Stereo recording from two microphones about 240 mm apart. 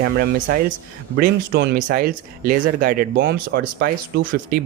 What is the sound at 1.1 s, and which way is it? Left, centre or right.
Speech, right.